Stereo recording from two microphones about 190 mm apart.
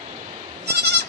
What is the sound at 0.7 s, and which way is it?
Goat, 60° right (ahead or behind).